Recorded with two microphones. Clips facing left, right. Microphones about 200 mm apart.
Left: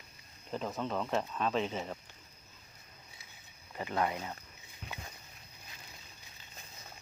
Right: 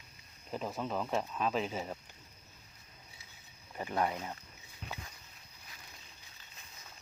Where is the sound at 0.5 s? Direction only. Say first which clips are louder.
Left 1 dB; 5° right (ahead or behind).